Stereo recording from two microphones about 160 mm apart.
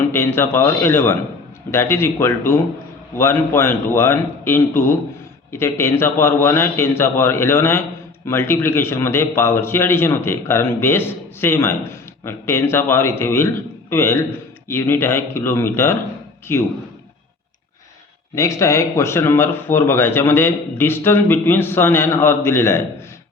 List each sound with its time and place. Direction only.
0.1 s speech: 15° left (ahead or behind)
18.3 s speech: 20° left (ahead or behind)